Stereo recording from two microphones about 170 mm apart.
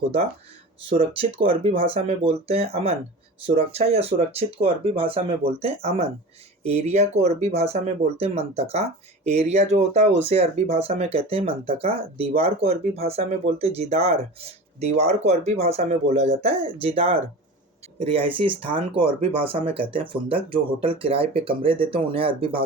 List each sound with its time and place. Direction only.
0.9 s speech: 30° right (ahead or behind)